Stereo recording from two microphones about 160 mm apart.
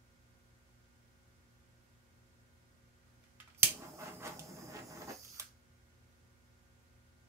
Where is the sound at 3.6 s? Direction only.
15° right (ahead or behind).